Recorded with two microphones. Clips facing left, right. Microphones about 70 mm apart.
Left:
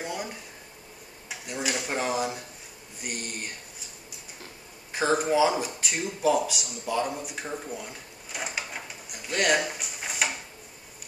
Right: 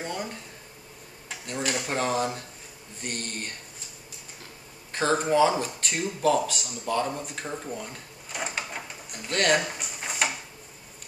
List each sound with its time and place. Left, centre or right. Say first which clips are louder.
0.0 s a sound: right 1 dB; centre
1.3 s a man's voice: right 1 dB; centre
4.9 s a man's voice: right 1 dB; centre
7.4 s drawer open or close: right 1 dB; centre